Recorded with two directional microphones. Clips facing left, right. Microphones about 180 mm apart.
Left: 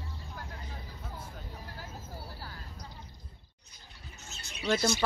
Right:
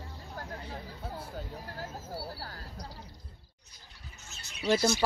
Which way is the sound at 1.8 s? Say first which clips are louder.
Right 8 dB; 45° right (ahead or behind).